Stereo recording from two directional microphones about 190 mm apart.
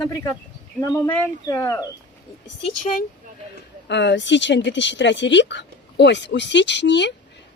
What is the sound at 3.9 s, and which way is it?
Speech, 65° left (ahead or behind).